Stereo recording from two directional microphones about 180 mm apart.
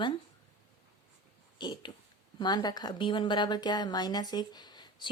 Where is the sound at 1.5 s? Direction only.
25° left (ahead or behind).